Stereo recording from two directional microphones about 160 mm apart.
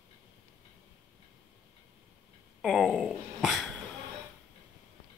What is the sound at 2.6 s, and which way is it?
Speech, centre (ahead or behind).